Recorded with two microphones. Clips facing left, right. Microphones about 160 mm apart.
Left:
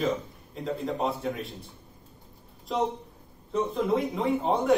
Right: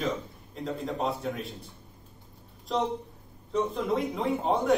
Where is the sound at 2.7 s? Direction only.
Centre (ahead or behind).